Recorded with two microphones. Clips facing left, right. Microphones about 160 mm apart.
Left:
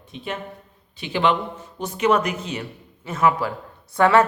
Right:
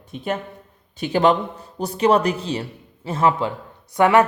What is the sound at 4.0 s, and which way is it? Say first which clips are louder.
Speech: right 1 dB; 15° right (ahead or behind).